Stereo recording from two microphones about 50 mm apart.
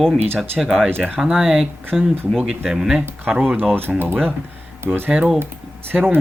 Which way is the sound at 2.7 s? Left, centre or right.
Centre.